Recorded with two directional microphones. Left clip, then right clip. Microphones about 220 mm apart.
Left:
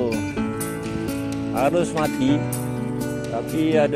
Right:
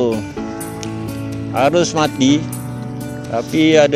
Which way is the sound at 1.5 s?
5° right (ahead or behind).